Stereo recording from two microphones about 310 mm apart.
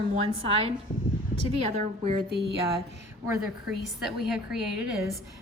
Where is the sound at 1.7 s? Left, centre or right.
Right.